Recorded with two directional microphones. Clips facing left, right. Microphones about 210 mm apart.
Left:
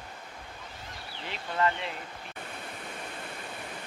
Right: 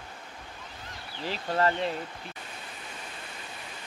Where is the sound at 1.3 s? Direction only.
35° right (ahead or behind).